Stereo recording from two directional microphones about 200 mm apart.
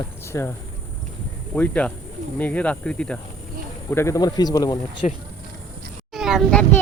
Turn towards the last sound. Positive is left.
turn(degrees=0)  # may be behind; listen again after turning